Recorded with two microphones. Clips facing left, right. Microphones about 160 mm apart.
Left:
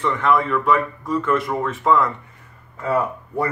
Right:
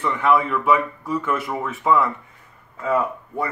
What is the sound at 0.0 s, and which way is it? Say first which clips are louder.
Speech: even; 5° right (ahead or behind).